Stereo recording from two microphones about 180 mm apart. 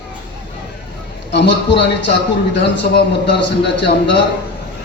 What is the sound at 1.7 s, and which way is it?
A man's voice, 75° left (ahead or behind).